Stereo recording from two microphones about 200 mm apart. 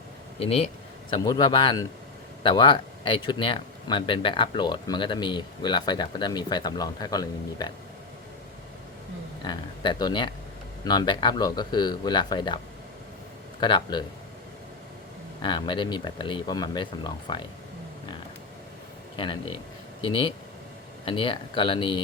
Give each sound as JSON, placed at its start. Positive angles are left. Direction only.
{"t": 0.3, "sound": "speech", "side_deg": 30}
{"t": 9.4, "sound": "speech", "side_deg": 25}
{"t": 13.6, "sound": "speech", "side_deg": 20}
{"t": 15.4, "sound": "speech", "side_deg": 25}
{"t": 19.1, "sound": "speech", "side_deg": 25}